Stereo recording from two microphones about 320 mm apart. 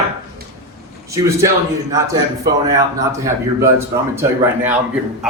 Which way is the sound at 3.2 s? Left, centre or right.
Centre.